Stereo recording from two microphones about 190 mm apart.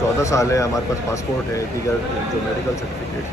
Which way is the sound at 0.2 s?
15° left (ahead or behind).